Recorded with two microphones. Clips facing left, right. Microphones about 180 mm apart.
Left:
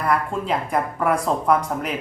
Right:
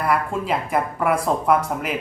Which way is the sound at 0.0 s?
5° right (ahead or behind).